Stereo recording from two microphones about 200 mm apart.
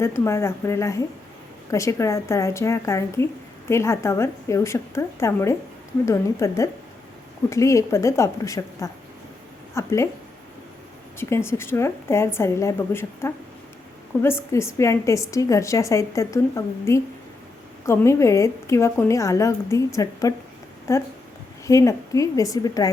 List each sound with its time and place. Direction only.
0.0 s a woman's voice: 15° left (ahead or behind)
11.2 s a woman's voice: 15° left (ahead or behind)